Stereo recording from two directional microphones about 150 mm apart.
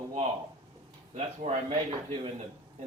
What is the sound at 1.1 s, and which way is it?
Speech, 40° right (ahead or behind).